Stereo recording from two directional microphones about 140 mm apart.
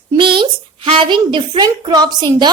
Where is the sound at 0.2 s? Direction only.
35° right (ahead or behind).